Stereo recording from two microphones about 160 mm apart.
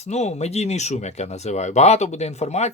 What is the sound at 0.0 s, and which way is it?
Speech, 45° left (ahead or behind).